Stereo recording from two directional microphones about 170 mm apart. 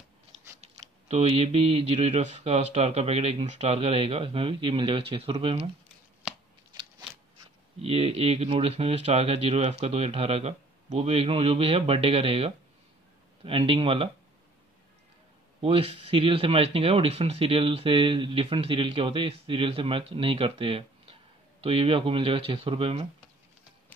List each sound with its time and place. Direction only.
0.6 s speech: 40° right (ahead or behind)
7.8 s speech: 35° right (ahead or behind)
15.6 s speech: 35° right (ahead or behind)